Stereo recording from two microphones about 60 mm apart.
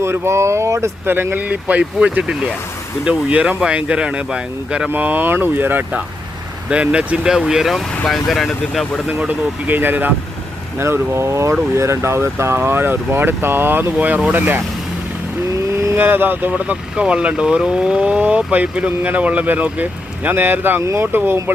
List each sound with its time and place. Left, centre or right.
0.0 s speech: right
1.0 s speech: right; by 4.9 s centre
4.9 s speech: right
6.7 s speech: centre
7.3 s speech: centre
9.6 s speech: right
10.8 s speech: right
16.0 s speech: right